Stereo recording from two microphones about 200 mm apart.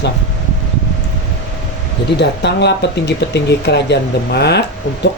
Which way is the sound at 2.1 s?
60° left (ahead or behind).